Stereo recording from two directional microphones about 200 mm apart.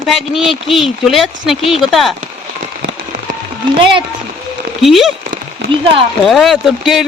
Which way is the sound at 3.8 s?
25° right (ahead or behind).